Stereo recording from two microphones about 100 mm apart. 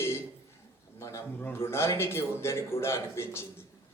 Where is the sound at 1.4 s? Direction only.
25° left (ahead or behind).